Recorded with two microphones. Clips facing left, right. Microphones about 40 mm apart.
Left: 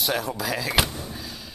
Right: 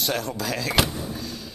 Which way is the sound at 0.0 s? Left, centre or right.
Centre.